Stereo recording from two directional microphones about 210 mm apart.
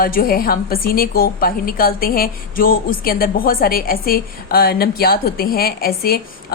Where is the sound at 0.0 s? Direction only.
45° left (ahead or behind).